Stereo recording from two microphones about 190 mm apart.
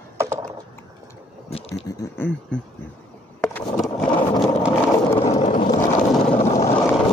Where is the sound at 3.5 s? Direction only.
5° left (ahead or behind).